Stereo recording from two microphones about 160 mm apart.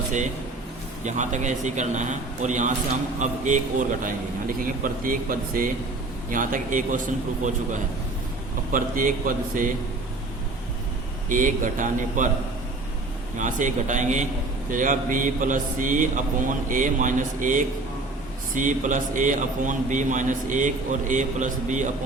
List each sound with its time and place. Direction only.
1.0 s a man's voice: 50° right (ahead or behind)
8.7 s a man's voice: 55° right (ahead or behind)
11.3 s a man's voice: 55° right (ahead or behind)
13.4 s a man's voice: 50° right (ahead or behind)